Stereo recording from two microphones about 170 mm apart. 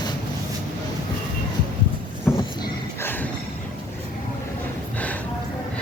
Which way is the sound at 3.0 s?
10° left (ahead or behind).